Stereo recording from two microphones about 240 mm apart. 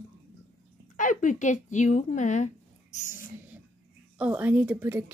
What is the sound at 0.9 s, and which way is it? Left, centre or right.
Speech, left.